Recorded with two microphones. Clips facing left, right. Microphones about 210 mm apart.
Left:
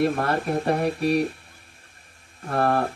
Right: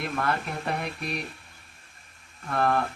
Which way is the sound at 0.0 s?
35° left (ahead or behind).